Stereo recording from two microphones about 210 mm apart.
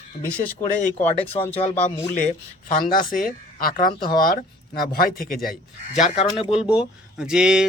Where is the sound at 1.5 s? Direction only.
30° left (ahead or behind).